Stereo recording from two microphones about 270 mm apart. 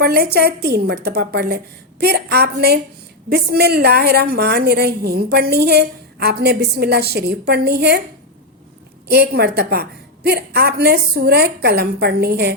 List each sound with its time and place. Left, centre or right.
0.0 s a woman's voice: right
9.0 s a woman's voice: right